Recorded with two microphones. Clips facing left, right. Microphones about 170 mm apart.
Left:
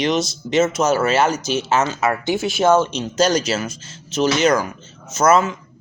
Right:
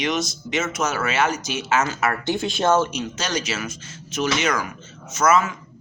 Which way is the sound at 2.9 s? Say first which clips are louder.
Left 9 dB; 35° left (ahead or behind).